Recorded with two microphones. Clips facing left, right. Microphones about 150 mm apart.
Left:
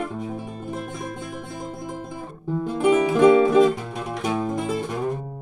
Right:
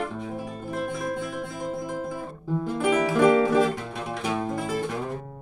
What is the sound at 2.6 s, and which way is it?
Music, 20° left (ahead or behind).